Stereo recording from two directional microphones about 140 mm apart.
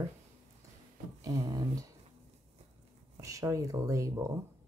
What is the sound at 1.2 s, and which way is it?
Speech, 30° right (ahead or behind).